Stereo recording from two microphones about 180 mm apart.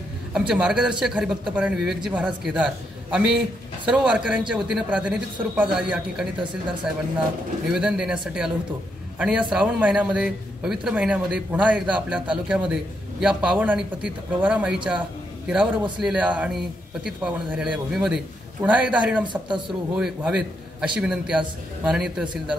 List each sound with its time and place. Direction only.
0.3 s a man's voice: 5° right (ahead or behind)
7.7 s a man's voice: 5° right (ahead or behind)